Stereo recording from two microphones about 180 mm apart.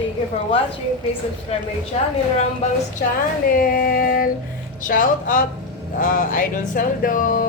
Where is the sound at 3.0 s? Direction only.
50° left (ahead or behind).